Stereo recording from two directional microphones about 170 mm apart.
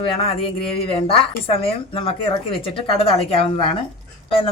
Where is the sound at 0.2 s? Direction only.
35° left (ahead or behind).